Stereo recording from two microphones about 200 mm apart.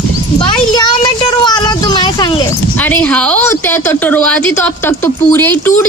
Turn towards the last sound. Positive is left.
turn(degrees=10)  # may be behind; listen again after turning